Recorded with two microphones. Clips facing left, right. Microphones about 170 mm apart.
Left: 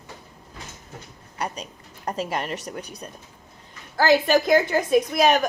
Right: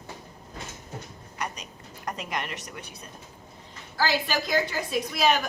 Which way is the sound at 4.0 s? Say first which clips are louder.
Left 9 dB; 50° left (ahead or behind).